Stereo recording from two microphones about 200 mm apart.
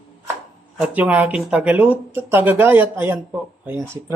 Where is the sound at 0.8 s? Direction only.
5° right (ahead or behind).